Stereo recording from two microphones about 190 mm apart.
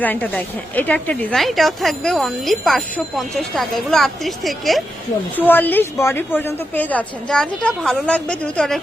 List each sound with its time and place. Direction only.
0.0 s a woman's voice: 10° left (ahead or behind)